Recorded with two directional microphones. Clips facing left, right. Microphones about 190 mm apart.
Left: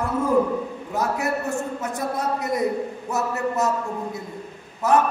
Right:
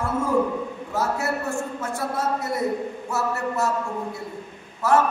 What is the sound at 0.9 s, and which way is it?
A man's voice, 15° left (ahead or behind).